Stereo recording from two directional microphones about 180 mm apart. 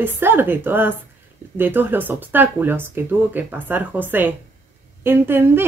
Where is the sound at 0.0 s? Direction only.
10° right (ahead or behind).